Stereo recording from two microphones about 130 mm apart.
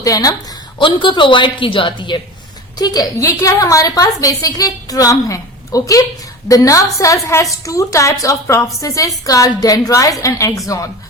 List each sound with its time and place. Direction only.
0.0 s a woman's voice: 25° left (ahead or behind)
0.8 s a woman's voice: 40° left (ahead or behind); by 10.6 s 25° left (ahead or behind)